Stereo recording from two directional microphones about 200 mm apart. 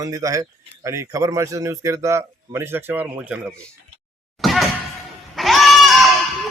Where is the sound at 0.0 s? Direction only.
15° right (ahead or behind).